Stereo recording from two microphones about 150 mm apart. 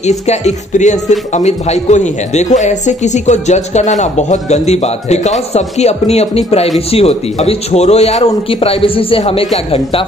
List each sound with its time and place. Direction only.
0.0 s speech: 50° left (ahead or behind)